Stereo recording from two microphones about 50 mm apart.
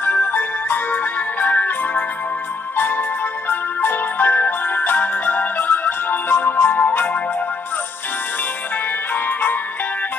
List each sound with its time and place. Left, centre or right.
0.0 s music: left
9.1 s music: left